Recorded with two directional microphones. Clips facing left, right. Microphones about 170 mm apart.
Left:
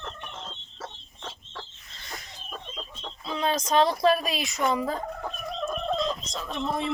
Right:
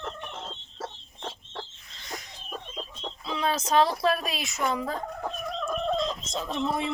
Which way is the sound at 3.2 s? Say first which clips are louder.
Left 1 dB; 5° right (ahead or behind).